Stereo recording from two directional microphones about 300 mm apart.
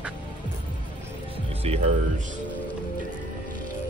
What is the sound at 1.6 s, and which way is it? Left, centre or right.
Speech, right.